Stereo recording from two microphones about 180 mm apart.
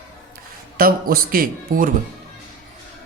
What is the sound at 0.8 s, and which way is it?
Speech, 55° right (ahead or behind).